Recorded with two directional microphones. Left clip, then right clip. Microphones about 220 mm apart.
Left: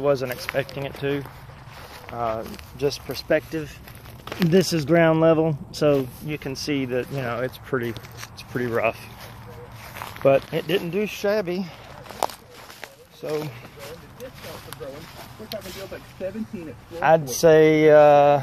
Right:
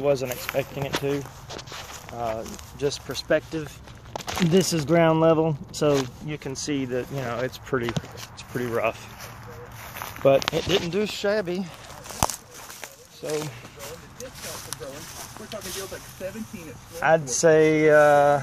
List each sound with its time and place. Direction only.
0.0 s speech: centre (ahead or behind)
2.2 s speech: 5° left (ahead or behind)
9.9 s speech: 5° right (ahead or behind)
12.8 s a sound: centre (ahead or behind)
16.2 s speech: 45° left (ahead or behind)
17.3 s speech: 10° left (ahead or behind)